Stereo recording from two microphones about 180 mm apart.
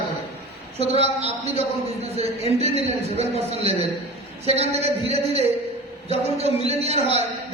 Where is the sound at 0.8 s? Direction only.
35° right (ahead or behind).